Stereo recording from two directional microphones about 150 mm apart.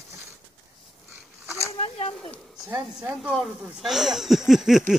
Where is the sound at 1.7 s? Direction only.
40° left (ahead or behind).